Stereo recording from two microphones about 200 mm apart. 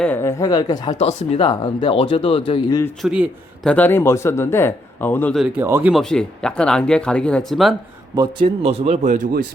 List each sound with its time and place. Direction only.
0.0 s a man's voice: 10° left (ahead or behind)
0.9 s speech: 30° left (ahead or behind)
1.5 s speech: 20° left (ahead or behind)
3.0 s a man's voice: centre (ahead or behind)
5.4 s speech: 10° right (ahead or behind)
5.9 s speech: centre (ahead or behind)
8.1 s speech: 25° right (ahead or behind); by 9.4 s 40° right (ahead or behind)